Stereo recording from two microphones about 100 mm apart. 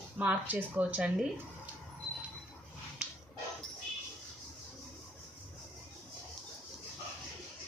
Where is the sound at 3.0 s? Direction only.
10° right (ahead or behind).